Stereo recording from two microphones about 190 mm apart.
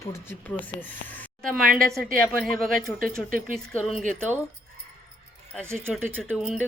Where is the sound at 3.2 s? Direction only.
45° right (ahead or behind).